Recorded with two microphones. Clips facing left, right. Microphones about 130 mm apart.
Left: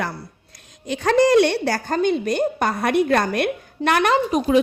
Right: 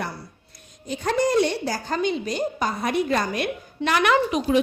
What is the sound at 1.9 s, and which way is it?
A woman's voice, 55° left (ahead or behind).